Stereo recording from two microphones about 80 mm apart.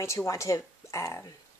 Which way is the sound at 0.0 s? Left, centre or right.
Left.